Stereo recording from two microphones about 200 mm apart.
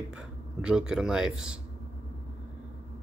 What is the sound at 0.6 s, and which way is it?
Speech, 5° right (ahead or behind).